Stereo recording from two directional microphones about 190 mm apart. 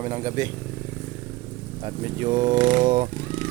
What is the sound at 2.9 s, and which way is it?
Speech, 40° right (ahead or behind).